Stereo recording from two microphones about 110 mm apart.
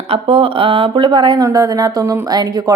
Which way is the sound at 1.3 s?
30° right (ahead or behind).